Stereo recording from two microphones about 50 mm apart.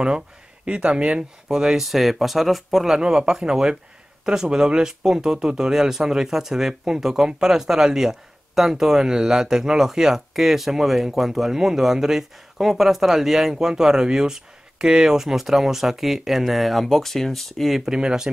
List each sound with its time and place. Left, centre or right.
0.7 s speech: right
1.5 s speech: centre